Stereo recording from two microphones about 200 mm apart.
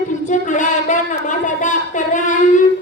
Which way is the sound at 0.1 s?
40° left (ahead or behind).